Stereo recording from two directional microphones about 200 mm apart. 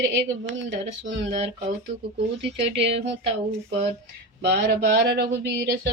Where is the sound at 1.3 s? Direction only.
35° right (ahead or behind).